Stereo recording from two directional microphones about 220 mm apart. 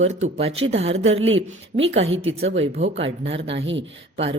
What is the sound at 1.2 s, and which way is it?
Speech, 60° right (ahead or behind).